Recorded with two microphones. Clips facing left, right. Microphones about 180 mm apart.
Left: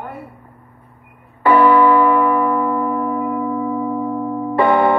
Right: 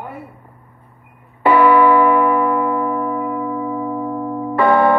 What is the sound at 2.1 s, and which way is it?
Church bell, 15° right (ahead or behind).